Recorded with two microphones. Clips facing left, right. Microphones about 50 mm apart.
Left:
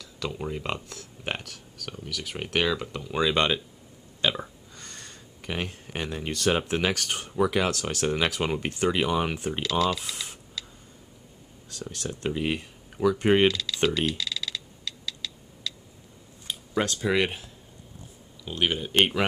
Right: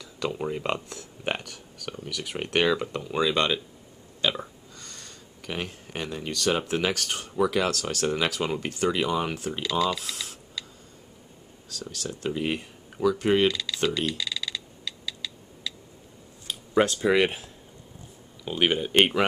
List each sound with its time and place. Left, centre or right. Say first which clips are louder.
0.0 s speech: right 3 dB; centre
3.1 s speech: even; centre
4.2 s burping: even; centre
4.7 s a sound: left 2 dB; left
5.5 s speech: left 1 dB; centre
9.6 s speech: even; centre
11.7 s speech: even; left
12.3 s speech: even; centre
13.2 s speech: left 2 dB; left
13.5 s speech: left 1 dB; centre
13.8 s a sound: left 2 dB; centre
16.7 s speech: right 4 dB; centre